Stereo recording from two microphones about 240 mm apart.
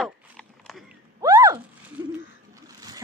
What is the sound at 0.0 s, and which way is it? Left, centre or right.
Dog, centre.